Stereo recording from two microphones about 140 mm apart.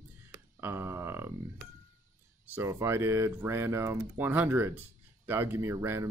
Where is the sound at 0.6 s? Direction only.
15° right (ahead or behind).